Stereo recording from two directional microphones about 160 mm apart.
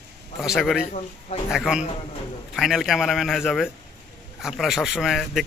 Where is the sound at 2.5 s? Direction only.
Centre (ahead or behind).